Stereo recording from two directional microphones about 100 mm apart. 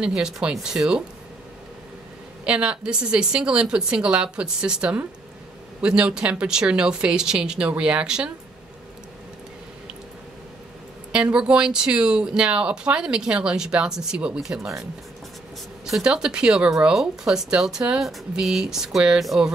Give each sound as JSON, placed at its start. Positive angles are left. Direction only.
{"t": 0.0, "sound": "speech", "side_deg": -10}
{"t": 2.4, "sound": "speech", "side_deg": -10}
{"t": 11.1, "sound": "speech", "side_deg": -10}